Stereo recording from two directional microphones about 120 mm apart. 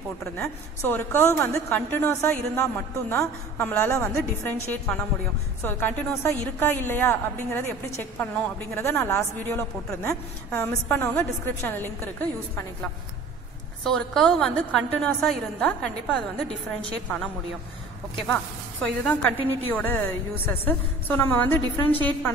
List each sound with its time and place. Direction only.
0.8 s a woman's voice: 15° left (ahead or behind)
13.8 s a woman's voice: 5° left (ahead or behind)
18.1 s a woman's voice: 10° left (ahead or behind)